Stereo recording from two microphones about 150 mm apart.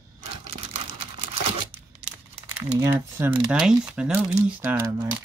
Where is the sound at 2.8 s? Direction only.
15° right (ahead or behind).